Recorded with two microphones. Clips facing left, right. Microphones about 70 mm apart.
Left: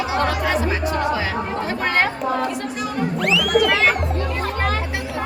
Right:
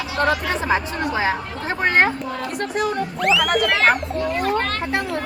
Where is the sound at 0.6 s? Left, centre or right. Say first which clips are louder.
Even; right.